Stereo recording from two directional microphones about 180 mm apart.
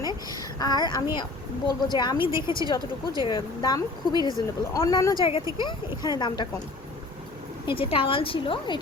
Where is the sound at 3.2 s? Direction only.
25° left (ahead or behind).